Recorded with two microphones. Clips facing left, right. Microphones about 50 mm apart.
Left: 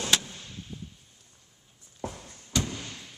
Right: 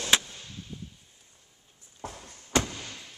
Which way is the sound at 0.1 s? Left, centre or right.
Right.